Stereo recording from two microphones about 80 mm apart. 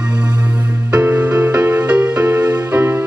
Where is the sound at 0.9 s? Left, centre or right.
Centre.